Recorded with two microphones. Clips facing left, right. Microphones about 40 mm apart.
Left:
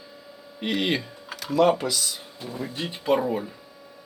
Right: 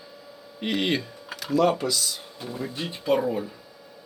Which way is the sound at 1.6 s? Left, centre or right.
Centre.